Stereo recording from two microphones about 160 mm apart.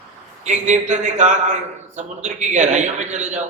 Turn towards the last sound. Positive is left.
turn(degrees=-50)  # may be behind; listen again after turning